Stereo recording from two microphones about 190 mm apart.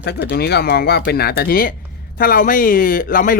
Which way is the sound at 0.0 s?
60° left (ahead or behind).